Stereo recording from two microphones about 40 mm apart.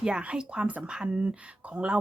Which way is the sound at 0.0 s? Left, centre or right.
Right.